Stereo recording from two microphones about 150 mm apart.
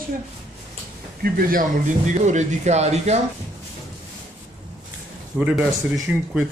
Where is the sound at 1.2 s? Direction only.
75° right (ahead or behind); by 3.2 s 45° right (ahead or behind).